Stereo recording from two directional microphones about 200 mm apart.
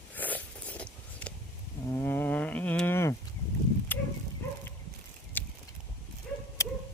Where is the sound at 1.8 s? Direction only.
10° left (ahead or behind).